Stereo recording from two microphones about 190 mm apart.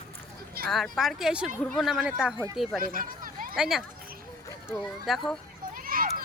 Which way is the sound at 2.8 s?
45° right (ahead or behind).